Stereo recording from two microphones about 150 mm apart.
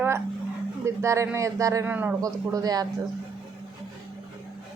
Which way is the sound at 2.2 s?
25° right (ahead or behind).